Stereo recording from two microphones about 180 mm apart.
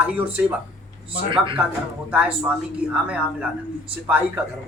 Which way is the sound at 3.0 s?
5° right (ahead or behind).